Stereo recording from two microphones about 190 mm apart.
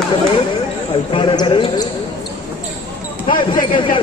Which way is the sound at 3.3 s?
25° left (ahead or behind).